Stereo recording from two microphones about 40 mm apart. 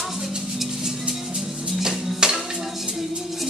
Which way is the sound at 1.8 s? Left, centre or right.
Centre.